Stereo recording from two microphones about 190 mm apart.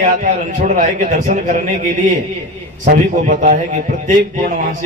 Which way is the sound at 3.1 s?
40° right (ahead or behind).